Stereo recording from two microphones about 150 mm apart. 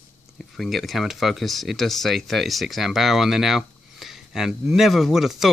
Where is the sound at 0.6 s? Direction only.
Centre (ahead or behind).